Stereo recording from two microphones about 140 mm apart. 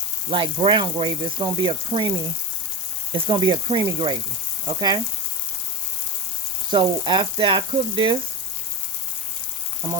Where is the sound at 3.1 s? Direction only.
35° right (ahead or behind).